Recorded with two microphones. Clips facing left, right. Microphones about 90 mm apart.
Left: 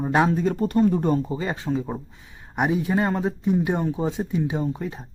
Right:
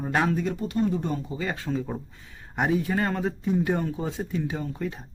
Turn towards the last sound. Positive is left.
turn(degrees=20)  # may be behind; listen again after turning